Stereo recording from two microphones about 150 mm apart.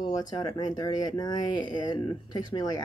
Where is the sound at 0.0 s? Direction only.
25° left (ahead or behind).